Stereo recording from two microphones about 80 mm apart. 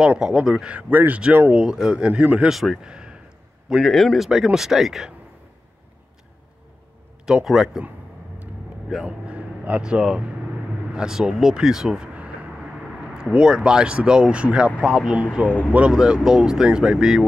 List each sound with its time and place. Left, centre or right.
0.1 s speech: centre
2.5 s a man's voice: centre
7.4 s speech: centre
9.0 s speech: centre
15.4 s speech: centre
15.9 s speech: centre